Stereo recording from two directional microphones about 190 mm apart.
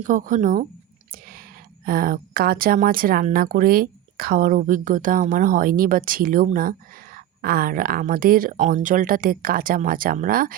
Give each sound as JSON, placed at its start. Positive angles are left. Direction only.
{"t": 0.0, "sound": "speech", "side_deg": -45}